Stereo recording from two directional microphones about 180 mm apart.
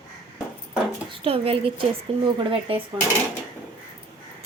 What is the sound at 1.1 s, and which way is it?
A woman's voice, 30° right (ahead or behind).